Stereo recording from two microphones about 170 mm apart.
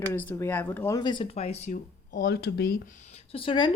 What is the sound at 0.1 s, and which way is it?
Speech, 15° left (ahead or behind).